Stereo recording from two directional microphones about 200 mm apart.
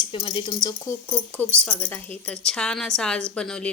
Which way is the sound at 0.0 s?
25° left (ahead or behind).